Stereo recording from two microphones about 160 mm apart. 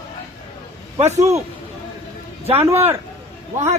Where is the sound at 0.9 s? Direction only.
45° right (ahead or behind).